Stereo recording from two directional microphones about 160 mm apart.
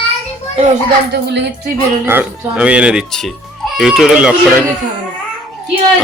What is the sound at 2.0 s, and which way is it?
Speech, 10° right (ahead or behind).